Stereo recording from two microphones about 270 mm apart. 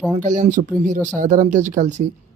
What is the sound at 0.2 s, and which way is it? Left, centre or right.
Speech, right.